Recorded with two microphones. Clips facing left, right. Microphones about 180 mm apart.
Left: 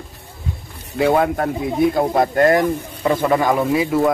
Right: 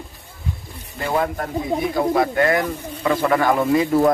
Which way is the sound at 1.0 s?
65° left (ahead or behind).